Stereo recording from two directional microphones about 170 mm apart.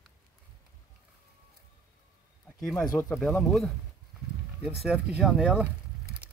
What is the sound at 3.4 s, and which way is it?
Speech, centre (ahead or behind).